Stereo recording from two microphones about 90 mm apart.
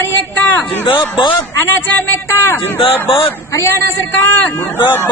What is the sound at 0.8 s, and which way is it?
Speech, 70° left (ahead or behind).